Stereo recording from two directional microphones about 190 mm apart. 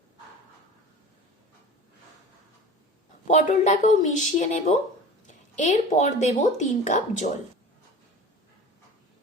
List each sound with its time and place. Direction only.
3.2 s speech: 35° left (ahead or behind)